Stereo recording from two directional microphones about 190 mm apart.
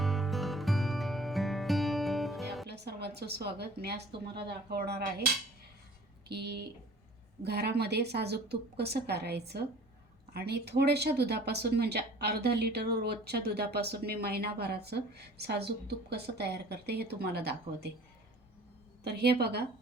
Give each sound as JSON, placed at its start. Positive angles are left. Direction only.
{"t": 0.0, "sound": "music", "side_deg": 0}
{"t": 2.6, "sound": "a woman's voice", "side_deg": -60}
{"t": 6.2, "sound": "speech", "side_deg": -60}
{"t": 19.0, "sound": "speech", "side_deg": -60}